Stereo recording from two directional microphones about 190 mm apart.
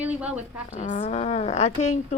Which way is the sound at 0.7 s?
40° left (ahead or behind).